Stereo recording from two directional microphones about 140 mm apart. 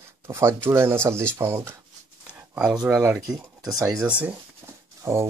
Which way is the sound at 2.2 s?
5° right (ahead or behind).